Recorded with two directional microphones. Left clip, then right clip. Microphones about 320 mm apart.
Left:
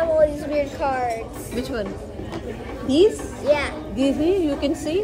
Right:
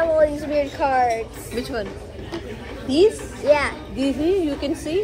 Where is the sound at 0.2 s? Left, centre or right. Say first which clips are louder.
Even; centre.